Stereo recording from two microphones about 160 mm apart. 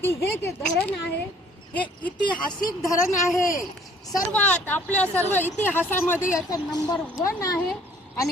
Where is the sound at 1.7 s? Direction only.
10° left (ahead or behind).